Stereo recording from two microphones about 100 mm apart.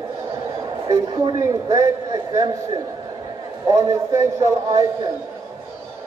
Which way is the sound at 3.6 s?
30° right (ahead or behind).